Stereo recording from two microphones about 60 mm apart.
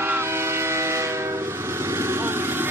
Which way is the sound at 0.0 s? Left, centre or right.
Right.